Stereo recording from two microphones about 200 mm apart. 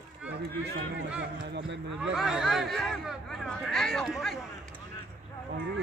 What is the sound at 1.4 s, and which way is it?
Speech, 65° right (ahead or behind).